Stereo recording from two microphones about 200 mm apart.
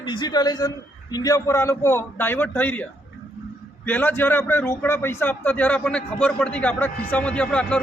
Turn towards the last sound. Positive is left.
turn(degrees=5)  # may be behind; listen again after turning